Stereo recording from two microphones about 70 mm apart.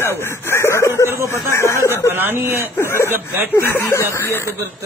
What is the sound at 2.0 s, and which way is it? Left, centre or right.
Speech, right.